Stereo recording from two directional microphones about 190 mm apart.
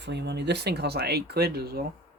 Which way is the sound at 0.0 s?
65° right (ahead or behind).